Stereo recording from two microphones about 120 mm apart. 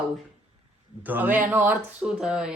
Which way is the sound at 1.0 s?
15° right (ahead or behind).